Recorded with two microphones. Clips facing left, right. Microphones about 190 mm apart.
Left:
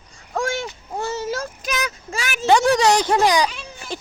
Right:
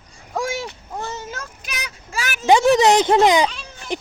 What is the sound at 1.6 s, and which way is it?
Speech, 40° left (ahead or behind).